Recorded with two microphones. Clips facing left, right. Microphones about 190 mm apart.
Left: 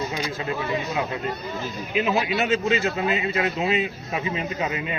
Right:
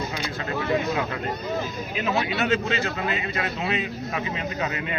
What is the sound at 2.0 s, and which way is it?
Speech, 20° left (ahead or behind).